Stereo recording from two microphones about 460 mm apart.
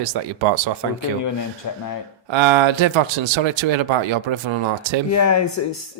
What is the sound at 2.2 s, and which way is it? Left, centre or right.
Speech, right.